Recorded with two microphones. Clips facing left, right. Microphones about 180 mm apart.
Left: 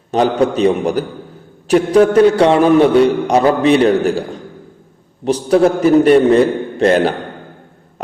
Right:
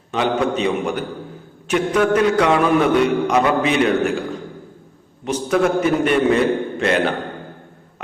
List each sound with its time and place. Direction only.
0.1 s a man's voice: 35° left (ahead or behind)
5.2 s a man's voice: 35° left (ahead or behind)